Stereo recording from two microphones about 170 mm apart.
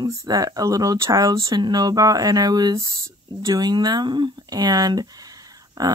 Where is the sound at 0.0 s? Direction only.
20° right (ahead or behind).